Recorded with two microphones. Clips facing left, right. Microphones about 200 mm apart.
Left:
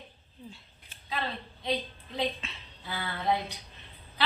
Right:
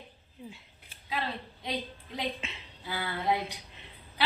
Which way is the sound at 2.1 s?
15° right (ahead or behind).